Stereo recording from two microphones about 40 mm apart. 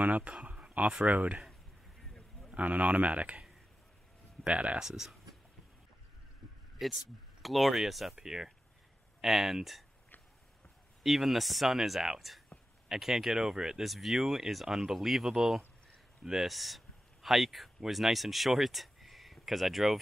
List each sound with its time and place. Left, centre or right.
0.0 s speech: right
0.3 s a sound: right
1.0 s speech: right
2.5 s speech: right
4.5 s speech: right
4.7 s speech: centre
6.8 s speech: centre
11.0 s speech: centre
13.8 s speech: centre